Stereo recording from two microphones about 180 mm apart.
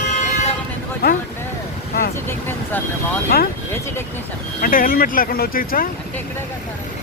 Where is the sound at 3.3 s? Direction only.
60° left (ahead or behind).